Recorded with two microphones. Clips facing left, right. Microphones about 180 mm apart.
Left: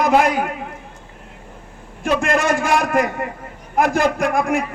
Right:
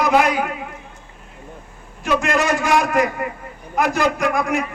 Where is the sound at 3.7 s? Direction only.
50° left (ahead or behind).